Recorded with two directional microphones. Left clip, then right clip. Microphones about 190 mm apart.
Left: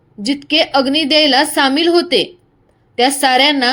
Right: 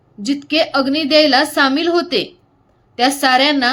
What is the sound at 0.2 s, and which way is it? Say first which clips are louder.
A woman's voice: left 2 dB; 10° left (ahead or behind).